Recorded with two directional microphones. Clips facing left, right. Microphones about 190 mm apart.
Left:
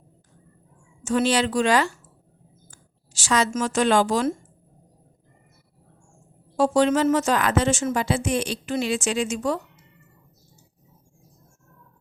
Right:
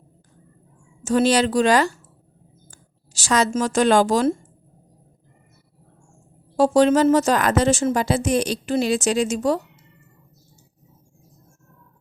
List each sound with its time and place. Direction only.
1.0 s a woman's voice: 35° right (ahead or behind)
6.6 s speech: 35° right (ahead or behind)